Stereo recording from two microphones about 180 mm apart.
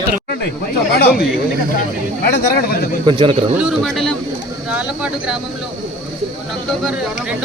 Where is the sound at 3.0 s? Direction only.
25° right (ahead or behind).